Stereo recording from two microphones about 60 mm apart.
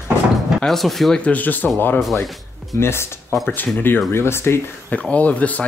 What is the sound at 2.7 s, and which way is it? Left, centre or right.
Speech, left.